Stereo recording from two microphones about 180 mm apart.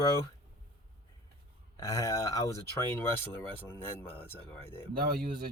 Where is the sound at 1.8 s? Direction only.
15° left (ahead or behind).